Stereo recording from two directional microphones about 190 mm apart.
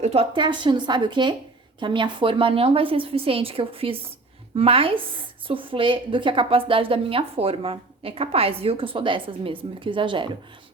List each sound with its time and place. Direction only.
0.0 s a woman's voice: 30° right (ahead or behind)